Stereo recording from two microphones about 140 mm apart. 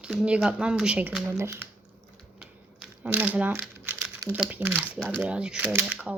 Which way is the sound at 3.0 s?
10° right (ahead or behind).